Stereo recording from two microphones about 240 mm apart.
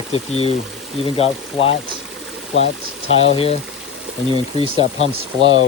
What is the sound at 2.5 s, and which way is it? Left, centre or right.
Speech, left.